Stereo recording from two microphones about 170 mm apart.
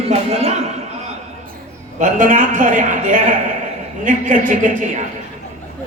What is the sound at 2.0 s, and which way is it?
A man's voice, 50° right (ahead or behind).